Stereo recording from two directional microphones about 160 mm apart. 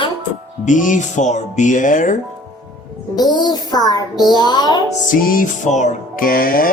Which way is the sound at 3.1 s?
25° left (ahead or behind).